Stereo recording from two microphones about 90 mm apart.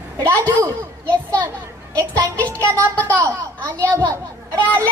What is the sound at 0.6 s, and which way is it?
Speech, 35° right (ahead or behind).